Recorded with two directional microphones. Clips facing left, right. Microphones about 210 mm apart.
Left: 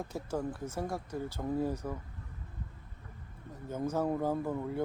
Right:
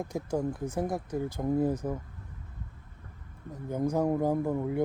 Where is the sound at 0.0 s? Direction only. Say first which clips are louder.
Right 5 dB; 15° right (ahead or behind).